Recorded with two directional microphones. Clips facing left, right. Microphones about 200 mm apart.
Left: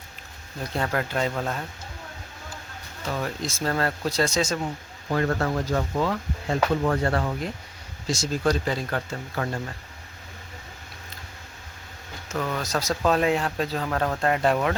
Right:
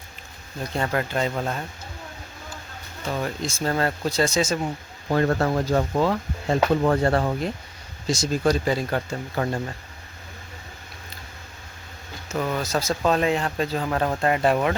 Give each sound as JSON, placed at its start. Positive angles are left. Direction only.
{"t": 0.6, "sound": "speech", "side_deg": 0}
{"t": 3.0, "sound": "speech", "side_deg": 0}
{"t": 5.0, "sound": "speech", "side_deg": -35}
{"t": 8.0, "sound": "speech", "side_deg": -15}
{"t": 12.3, "sound": "speech", "side_deg": -10}
{"t": 13.8, "sound": "speech", "side_deg": -10}